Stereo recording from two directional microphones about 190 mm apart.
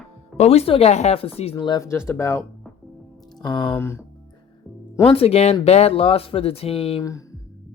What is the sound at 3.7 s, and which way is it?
Speech, 15° left (ahead or behind).